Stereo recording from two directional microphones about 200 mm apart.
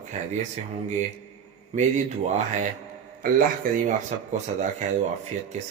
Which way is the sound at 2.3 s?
35° right (ahead or behind).